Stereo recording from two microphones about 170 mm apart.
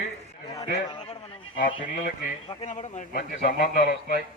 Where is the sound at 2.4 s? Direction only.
40° left (ahead or behind).